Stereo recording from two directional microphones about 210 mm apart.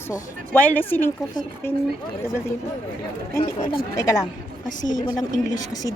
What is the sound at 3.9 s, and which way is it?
Speech, 15° left (ahead or behind).